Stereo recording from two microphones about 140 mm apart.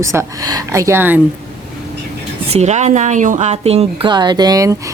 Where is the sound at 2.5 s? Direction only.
55° right (ahead or behind).